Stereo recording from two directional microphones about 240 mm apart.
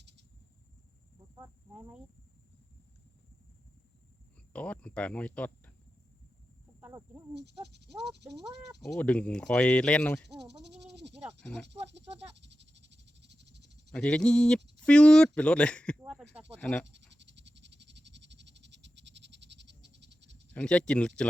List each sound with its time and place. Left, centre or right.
1.4 s speech: centre
4.5 s speech: centre
6.7 s cricket: centre
7.3 s speech: right
8.8 s speech: centre
10.5 s speech: right
10.9 s wild animals: right
11.2 s speech: centre
11.9 s snake: right
13.9 s speech: centre
16.9 s frog: right
20.5 s speech: centre